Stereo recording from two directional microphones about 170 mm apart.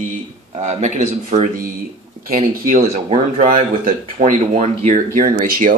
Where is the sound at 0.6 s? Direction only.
40° right (ahead or behind).